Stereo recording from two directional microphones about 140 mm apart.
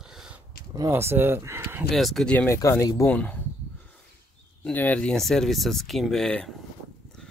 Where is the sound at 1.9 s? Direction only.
Centre (ahead or behind); by 3.1 s 20° left (ahead or behind).